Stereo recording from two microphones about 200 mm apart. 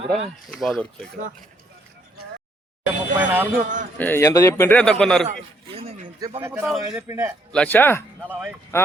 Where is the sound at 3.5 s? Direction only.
40° right (ahead or behind).